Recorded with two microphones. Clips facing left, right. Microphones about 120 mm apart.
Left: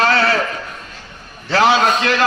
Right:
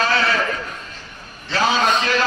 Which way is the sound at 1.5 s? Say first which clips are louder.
Left 4 dB; 70° left (ahead or behind).